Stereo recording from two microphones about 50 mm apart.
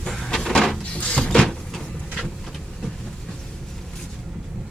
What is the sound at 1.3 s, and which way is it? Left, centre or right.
Vehicle, centre.